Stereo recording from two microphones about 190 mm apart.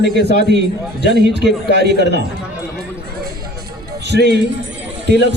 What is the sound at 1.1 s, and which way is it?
A man's voice, 60° right (ahead or behind).